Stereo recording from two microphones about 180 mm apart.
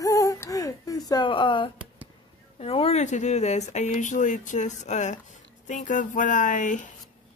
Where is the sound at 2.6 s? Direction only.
30° left (ahead or behind).